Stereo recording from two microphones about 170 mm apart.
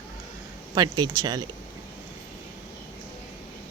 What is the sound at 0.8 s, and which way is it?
Speech, 20° right (ahead or behind).